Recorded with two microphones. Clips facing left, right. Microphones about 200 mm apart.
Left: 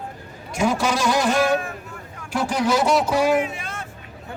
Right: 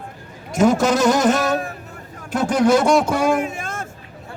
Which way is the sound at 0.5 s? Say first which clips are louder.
Right 6 dB; 45° right (ahead or behind).